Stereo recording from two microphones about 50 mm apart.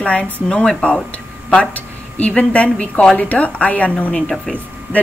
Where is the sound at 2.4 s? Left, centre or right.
Left.